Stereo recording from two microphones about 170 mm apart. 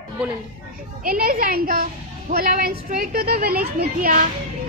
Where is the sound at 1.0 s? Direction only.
60° right (ahead or behind).